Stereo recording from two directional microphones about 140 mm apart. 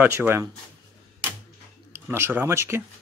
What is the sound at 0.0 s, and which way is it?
Speech, 15° right (ahead or behind).